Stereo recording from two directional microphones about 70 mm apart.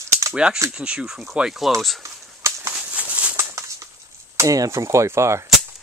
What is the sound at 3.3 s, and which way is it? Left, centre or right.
Bird, right.